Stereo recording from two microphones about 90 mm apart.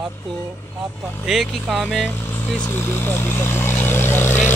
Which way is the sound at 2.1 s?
25° left (ahead or behind).